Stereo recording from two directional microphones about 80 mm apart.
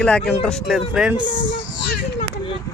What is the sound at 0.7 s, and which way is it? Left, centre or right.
Speech, centre.